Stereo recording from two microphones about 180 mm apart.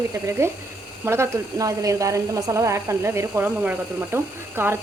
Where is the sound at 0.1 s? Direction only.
15° right (ahead or behind).